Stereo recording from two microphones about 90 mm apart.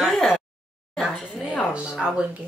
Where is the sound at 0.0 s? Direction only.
Centre (ahead or behind).